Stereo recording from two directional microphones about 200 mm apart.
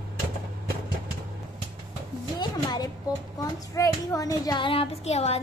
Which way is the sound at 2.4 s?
20° left (ahead or behind).